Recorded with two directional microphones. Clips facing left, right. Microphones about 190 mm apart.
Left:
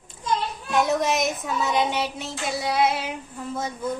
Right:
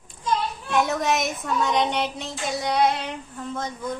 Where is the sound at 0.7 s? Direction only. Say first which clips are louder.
Left 1 dB; centre (ahead or behind).